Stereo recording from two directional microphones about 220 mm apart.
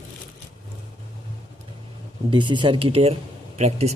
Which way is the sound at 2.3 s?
20° right (ahead or behind).